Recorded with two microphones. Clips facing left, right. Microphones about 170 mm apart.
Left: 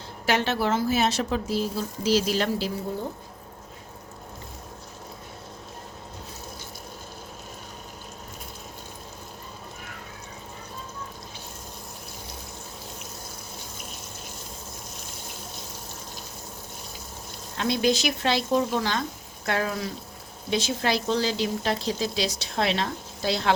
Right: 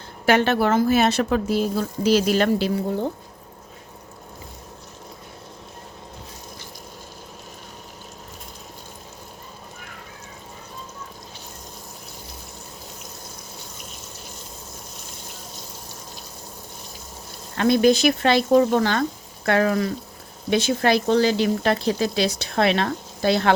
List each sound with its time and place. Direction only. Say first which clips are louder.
0.3 s speech: right 6 dB; 55° right (ahead or behind)
17.6 s speech: right 7 dB; 55° right (ahead or behind)